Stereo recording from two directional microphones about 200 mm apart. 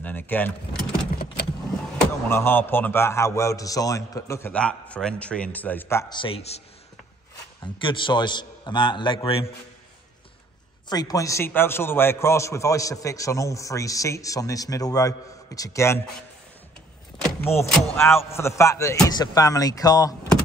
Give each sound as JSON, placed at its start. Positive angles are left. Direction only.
{"t": 0.0, "sound": "a man's voice", "side_deg": 10}
{"t": 2.0, "sound": "a man's voice", "side_deg": 10}
{"t": 6.1, "sound": "a man's voice", "side_deg": 30}
{"t": 7.6, "sound": "a man's voice", "side_deg": 25}
{"t": 10.9, "sound": "a man's voice", "side_deg": 20}
{"t": 17.2, "sound": "a man's voice", "side_deg": 10}